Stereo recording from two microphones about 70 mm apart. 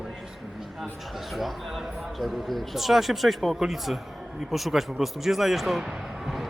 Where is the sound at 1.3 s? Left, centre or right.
Centre.